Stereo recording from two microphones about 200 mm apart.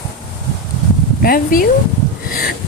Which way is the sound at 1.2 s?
45° left (ahead or behind).